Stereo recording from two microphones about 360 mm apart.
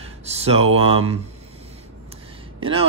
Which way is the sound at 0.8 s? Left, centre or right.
Centre.